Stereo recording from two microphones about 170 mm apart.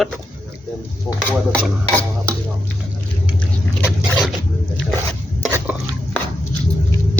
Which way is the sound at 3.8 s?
Centre (ahead or behind).